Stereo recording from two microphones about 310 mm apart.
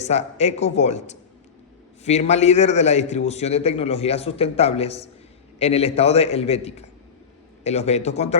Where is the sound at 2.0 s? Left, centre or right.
Left.